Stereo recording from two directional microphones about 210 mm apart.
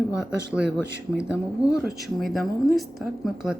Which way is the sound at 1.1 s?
5° right (ahead or behind).